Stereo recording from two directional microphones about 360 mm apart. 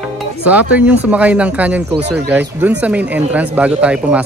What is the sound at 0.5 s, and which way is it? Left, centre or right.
Speech, centre.